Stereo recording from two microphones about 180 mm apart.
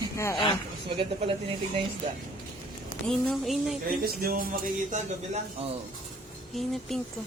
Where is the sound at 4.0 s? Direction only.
55° right (ahead or behind).